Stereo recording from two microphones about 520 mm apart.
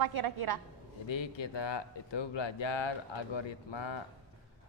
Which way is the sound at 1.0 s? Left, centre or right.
Left.